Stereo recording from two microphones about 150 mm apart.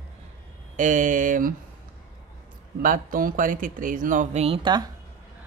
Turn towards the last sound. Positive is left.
turn(degrees=-35)  # may be behind; listen again after turning